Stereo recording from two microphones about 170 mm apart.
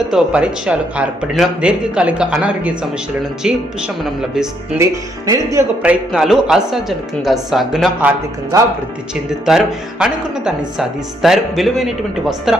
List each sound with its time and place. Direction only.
0.1 s speech: 5° right (ahead or behind)
4.8 s speech: 20° right (ahead or behind)
5.8 s speech: 5° right (ahead or behind)
9.5 s speech: 5° right (ahead or behind)